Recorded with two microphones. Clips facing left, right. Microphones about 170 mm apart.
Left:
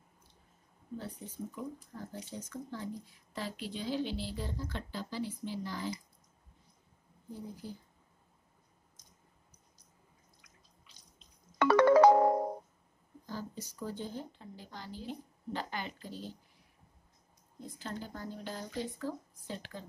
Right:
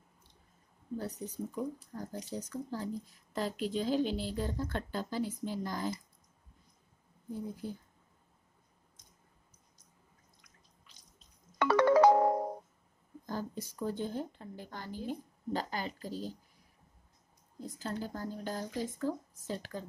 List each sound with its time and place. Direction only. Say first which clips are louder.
0.9 s speech: right 4 dB; 40° right (ahead or behind)
11.5 s music: left 2 dB; 60° left (ahead or behind)
13.3 s speech: right 4 dB; 50° right (ahead or behind)
17.6 s speech: right 4 dB; 40° right (ahead or behind)